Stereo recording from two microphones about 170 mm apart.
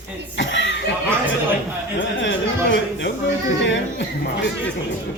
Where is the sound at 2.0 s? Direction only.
90° left.